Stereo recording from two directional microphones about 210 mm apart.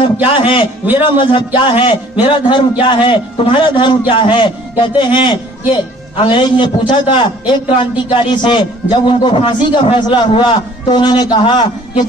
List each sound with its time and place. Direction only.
0.0 s a man's voice: 25° left (ahead or behind)